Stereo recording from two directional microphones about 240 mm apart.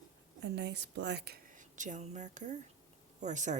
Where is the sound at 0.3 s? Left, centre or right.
Right.